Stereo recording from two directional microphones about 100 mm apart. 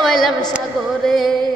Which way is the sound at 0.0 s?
Centre (ahead or behind).